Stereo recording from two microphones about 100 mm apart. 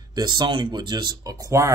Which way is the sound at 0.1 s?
45° right (ahead or behind).